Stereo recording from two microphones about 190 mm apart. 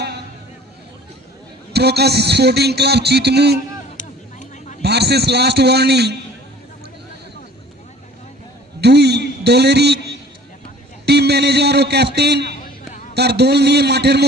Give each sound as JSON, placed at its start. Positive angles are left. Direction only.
{"t": 1.7, "sound": "a man's voice", "side_deg": -60}
{"t": 3.9, "sound": "a sound", "side_deg": 40}
{"t": 4.8, "sound": "a man's voice", "side_deg": -60}
{"t": 8.8, "sound": "a man's voice", "side_deg": -60}
{"t": 11.0, "sound": "a man's voice", "side_deg": -60}